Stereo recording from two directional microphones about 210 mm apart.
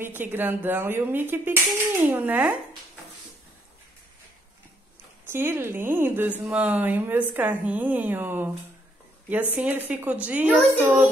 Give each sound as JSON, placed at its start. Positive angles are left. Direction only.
{"t": 0.0, "sound": "speech", "side_deg": -10}
{"t": 5.2, "sound": "speech", "side_deg": -10}